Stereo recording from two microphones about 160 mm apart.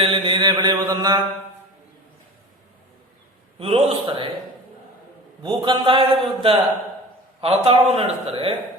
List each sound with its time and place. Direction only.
0.0 s mantra: 30° right (ahead or behind)
3.6 s a man's voice: 35° right (ahead or behind)
5.4 s a man's voice: 30° right (ahead or behind)